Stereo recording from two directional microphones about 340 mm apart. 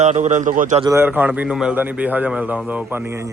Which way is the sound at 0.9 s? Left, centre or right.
Centre.